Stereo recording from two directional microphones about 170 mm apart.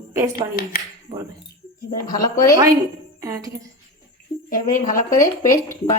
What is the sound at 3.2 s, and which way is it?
Speech, 20° right (ahead or behind).